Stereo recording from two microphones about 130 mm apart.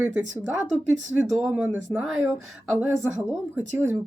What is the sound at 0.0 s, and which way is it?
Speech, 10° right (ahead or behind).